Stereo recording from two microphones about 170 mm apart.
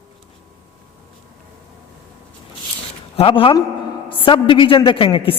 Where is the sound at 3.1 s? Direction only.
30° left (ahead or behind).